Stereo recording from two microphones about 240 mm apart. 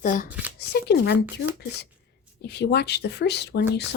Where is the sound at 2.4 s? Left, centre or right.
Left.